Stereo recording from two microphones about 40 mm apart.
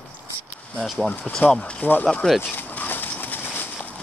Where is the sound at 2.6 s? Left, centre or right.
Left.